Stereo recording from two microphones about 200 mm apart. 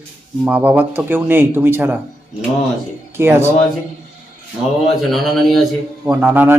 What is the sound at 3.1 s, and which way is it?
Speech, 10° right (ahead or behind).